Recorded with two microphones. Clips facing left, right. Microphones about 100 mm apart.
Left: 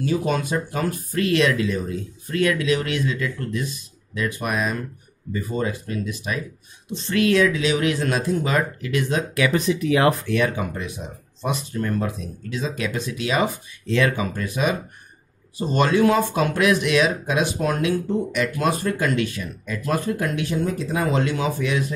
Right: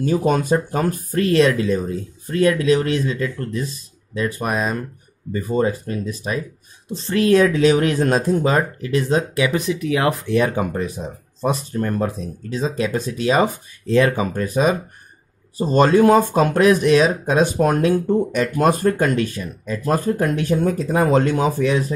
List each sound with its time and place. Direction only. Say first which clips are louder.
0.0 s speech: right 4 dB; 45° right (ahead or behind)
9.5 s speech: even; 5° right (ahead or behind)
10.2 s speech: right 3 dB; 30° right (ahead or behind)
10.6 s speech: right 5 dB; 40° right (ahead or behind)